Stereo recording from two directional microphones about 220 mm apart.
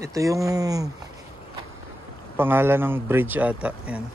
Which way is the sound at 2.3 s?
10° right (ahead or behind).